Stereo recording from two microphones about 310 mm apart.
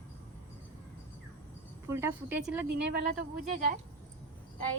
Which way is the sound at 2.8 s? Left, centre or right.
Right.